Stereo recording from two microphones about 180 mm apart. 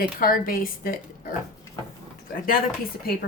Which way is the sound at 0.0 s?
55° left (ahead or behind).